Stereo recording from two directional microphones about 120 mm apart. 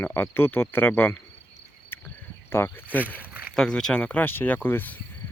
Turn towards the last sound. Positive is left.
turn(degrees=15)  # may be behind; listen again after turning